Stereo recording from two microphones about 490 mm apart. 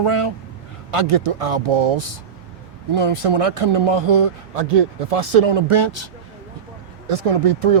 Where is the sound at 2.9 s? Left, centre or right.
Right.